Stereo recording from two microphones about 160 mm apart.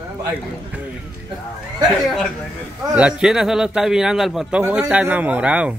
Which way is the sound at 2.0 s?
Centre (ahead or behind).